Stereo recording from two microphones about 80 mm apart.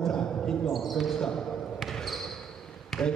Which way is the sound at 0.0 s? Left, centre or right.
Centre.